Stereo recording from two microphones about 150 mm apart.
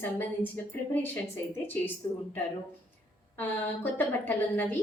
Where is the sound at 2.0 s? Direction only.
30° left (ahead or behind).